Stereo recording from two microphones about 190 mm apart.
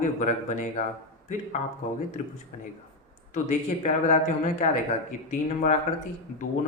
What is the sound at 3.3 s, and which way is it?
A man's voice, 40° left (ahead or behind).